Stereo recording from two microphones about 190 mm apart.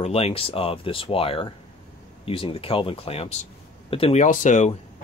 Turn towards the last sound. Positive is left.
turn(degrees=40)  # may be behind; listen again after turning